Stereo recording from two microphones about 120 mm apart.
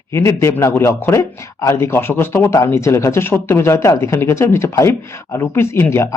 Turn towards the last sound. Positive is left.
turn(degrees=20)  # may be behind; listen again after turning